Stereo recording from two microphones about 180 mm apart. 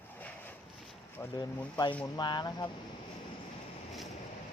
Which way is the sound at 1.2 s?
20° left (ahead or behind).